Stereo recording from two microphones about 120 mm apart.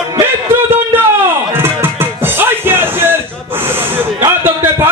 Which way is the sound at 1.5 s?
20° right (ahead or behind).